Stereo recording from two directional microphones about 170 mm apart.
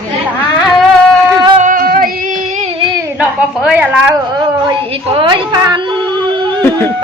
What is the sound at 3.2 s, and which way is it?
Speech, 5° right (ahead or behind).